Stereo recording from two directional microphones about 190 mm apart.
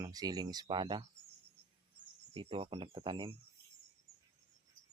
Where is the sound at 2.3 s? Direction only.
30° right (ahead or behind).